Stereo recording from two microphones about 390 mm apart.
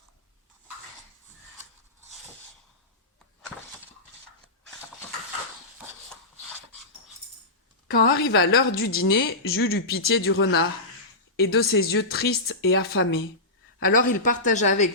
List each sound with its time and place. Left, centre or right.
7.9 s a woman's voice: left
13.8 s speech: left
14.3 s speech: centre